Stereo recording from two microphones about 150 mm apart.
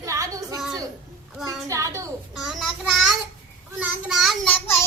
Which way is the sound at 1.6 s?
20° right (ahead or behind).